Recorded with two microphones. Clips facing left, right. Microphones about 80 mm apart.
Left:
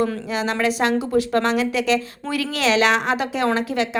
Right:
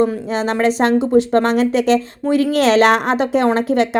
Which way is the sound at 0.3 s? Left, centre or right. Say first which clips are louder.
Right 5 dB; right.